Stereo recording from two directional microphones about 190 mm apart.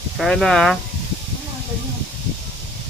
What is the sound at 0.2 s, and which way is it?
Speech, centre (ahead or behind).